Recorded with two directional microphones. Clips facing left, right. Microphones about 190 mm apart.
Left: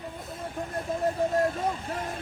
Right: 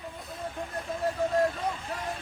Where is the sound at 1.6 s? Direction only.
50° left (ahead or behind).